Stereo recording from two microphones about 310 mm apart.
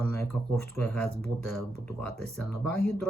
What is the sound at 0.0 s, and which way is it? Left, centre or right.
Speech, centre.